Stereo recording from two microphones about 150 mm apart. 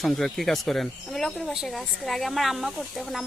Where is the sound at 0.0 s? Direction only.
Centre (ahead or behind).